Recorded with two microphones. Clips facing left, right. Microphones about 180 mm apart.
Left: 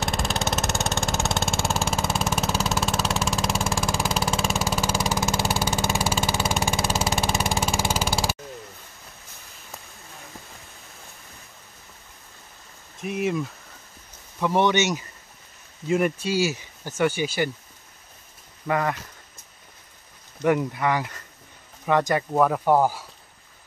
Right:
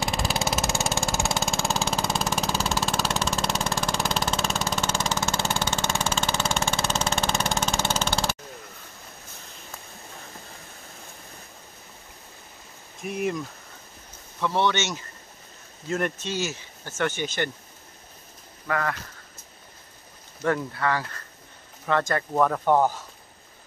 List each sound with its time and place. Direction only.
0.0 s vehicle: centre (ahead or behind)
13.0 s speech: 5° left (ahead or behind)
14.4 s speech: 15° left (ahead or behind)
18.7 s speech: 20° left (ahead or behind)
20.4 s speech: 15° left (ahead or behind)